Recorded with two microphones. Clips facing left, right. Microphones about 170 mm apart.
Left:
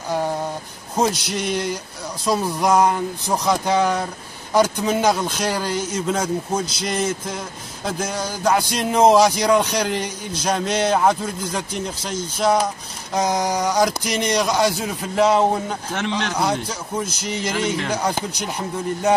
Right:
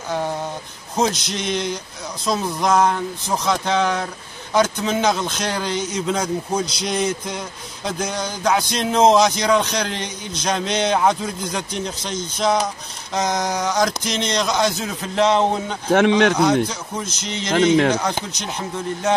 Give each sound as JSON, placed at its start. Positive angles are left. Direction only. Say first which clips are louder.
{"t": 0.9, "sound": "a man's voice", "louder": "even", "side_deg": 10}
{"t": 15.9, "sound": "speech", "louder": "right 12 dB", "side_deg": -60}
{"t": 16.6, "sound": "a man's voice", "louder": "left 1 dB", "side_deg": 10}